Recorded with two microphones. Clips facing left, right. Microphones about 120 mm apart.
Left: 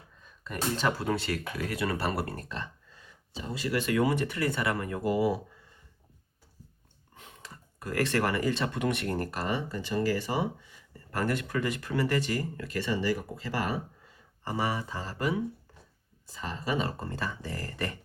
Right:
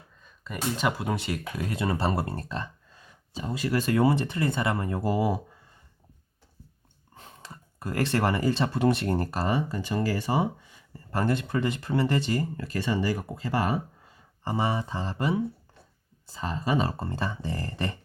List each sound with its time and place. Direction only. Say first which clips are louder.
0.2 s a sound: right 1 dB; centre (ahead or behind)
0.8 s speech: right 1 dB; 15° right (ahead or behind); by 2.6 s 35° right (ahead or behind)
3.3 s speech: right 3 dB; 45° right (ahead or behind)
7.2 s speech: right 3 dB; 30° right (ahead or behind)
11.1 s speech: right 3 dB; 25° right (ahead or behind)
14.4 s speech: right 3 dB; 25° right (ahead or behind)